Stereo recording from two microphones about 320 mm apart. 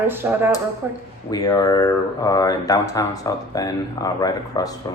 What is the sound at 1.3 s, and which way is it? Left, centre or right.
Speech, centre.